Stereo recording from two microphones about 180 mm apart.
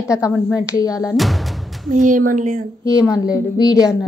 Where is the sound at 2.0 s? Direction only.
45° right (ahead or behind).